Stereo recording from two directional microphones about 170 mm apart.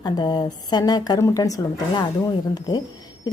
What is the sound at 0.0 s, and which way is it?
Speech, 25° left (ahead or behind).